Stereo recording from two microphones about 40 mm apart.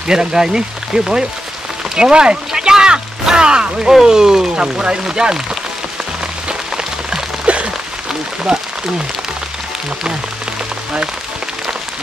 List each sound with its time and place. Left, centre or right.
0.0 s speech: centre
6.8 s rain on surface: centre
7.4 s rain on surface: right
8.5 s speech: centre